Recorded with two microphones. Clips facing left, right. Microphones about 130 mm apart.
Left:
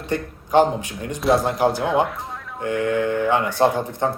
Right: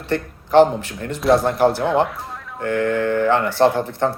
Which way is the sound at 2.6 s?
15° left (ahead or behind).